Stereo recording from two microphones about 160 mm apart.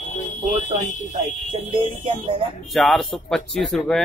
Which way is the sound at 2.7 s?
Centre (ahead or behind).